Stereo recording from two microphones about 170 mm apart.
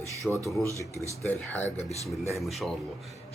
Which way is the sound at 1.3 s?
10° left (ahead or behind).